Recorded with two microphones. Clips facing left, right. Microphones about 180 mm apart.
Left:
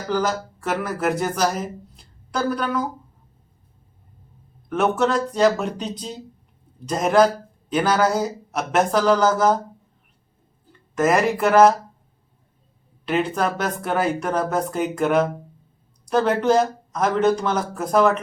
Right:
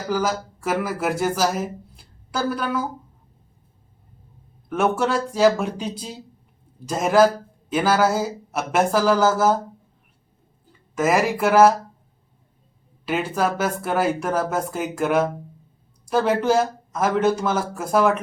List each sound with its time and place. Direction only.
0.1 s speech: 5° right (ahead or behind)
4.7 s a man's voice: 5° right (ahead or behind)
10.9 s speech: 5° right (ahead or behind)
13.1 s speech: 5° right (ahead or behind)